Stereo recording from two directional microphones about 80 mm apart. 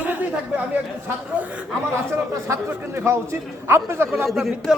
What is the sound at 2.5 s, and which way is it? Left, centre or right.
A man's voice, right.